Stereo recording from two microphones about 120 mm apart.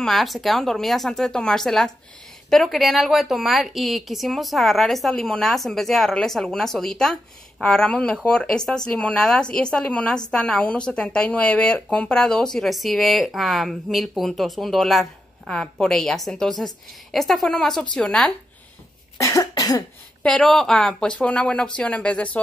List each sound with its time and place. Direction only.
0.0 s a woman's voice: centre (ahead or behind)
19.1 s cough: 25° left (ahead or behind)
20.2 s speech: 5° left (ahead or behind)